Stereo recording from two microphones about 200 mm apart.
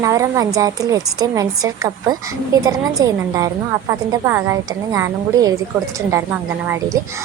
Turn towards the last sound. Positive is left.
turn(degrees=-15)  # may be behind; listen again after turning